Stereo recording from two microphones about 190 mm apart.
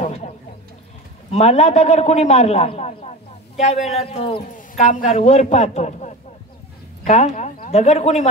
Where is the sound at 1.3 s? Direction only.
35° left (ahead or behind).